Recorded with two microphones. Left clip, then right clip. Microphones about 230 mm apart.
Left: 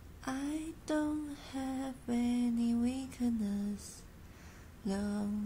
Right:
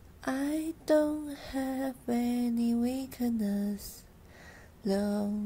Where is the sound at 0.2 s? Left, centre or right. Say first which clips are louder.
Right 6 dB; right.